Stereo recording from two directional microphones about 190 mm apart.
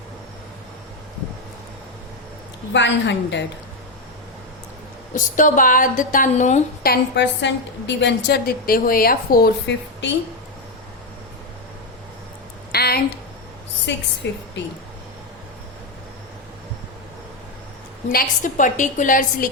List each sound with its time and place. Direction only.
2.7 s a woman's voice: 70° left (ahead or behind)
5.1 s a woman's voice: 45° left (ahead or behind)
6.8 s a woman's voice: 60° left (ahead or behind)
12.7 s a sound: 55° left (ahead or behind)
14.2 s a woman's voice: 65° left (ahead or behind)
18.1 s a woman's voice: 45° left (ahead or behind)